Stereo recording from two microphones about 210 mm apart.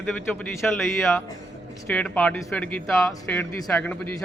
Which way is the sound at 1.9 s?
5° left (ahead or behind).